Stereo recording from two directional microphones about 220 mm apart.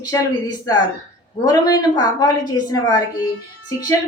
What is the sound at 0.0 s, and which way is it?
A woman's voice, 15° left (ahead or behind).